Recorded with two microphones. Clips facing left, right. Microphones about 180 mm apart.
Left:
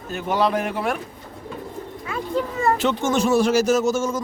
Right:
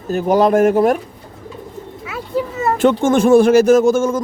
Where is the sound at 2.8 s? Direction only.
50° right (ahead or behind).